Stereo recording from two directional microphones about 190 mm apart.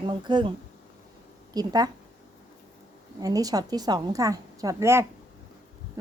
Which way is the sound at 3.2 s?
20° right (ahead or behind).